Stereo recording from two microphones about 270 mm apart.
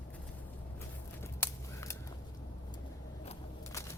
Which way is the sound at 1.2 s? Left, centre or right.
Centre.